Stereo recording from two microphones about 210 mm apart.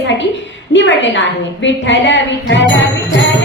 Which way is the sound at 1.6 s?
60° left (ahead or behind).